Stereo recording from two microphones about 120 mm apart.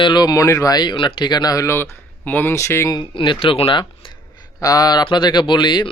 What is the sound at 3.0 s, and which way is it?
Speech, 45° left (ahead or behind).